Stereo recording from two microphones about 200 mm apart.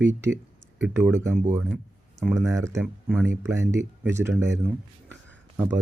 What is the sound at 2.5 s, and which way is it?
Speech, 15° right (ahead or behind).